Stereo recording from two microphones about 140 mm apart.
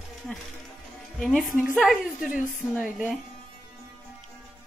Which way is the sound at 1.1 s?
Centre (ahead or behind).